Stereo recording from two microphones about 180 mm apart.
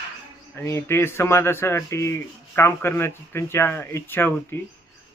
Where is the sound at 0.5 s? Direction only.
15° left (ahead or behind).